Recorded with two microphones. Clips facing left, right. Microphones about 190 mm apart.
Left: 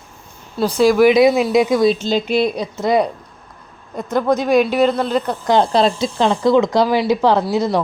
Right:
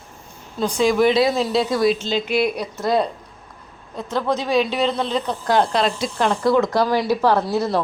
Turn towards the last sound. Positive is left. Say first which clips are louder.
# left 3 dB
turn(degrees=10)  # may be behind; listen again after turning